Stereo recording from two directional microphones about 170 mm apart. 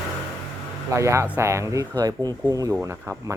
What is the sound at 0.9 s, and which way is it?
Speech, 15° right (ahead or behind).